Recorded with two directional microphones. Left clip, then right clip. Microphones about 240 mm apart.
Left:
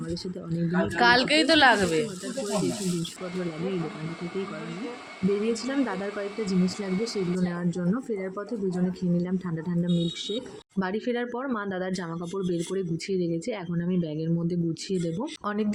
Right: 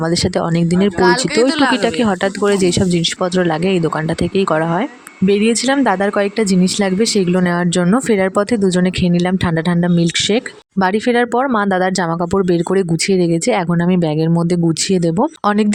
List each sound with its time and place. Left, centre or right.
0.9 s speech: centre
5.6 s speech: right